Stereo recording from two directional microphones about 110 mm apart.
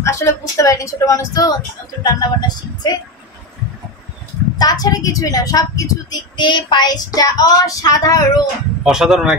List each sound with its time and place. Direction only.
0.0 s a woman's voice: 25° left (ahead or behind)
4.6 s a woman's voice: 35° left (ahead or behind)
8.8 s a man's voice: 5° right (ahead or behind)